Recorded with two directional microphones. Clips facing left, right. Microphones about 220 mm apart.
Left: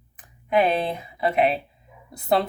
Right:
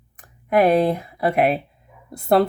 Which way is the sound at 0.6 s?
60° right (ahead or behind).